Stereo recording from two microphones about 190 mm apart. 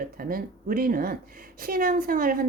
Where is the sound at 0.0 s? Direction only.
50° right (ahead or behind).